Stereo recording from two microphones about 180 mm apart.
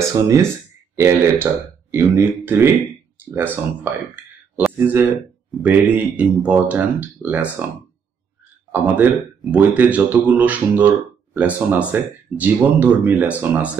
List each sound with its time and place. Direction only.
0.0 s speech: 15° right (ahead or behind)
8.8 s speech: 10° right (ahead or behind)